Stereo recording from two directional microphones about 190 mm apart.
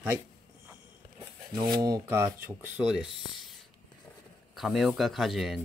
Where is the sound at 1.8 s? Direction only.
15° right (ahead or behind).